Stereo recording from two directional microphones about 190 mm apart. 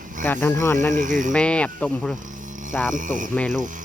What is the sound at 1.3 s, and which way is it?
Speech, 5° left (ahead or behind).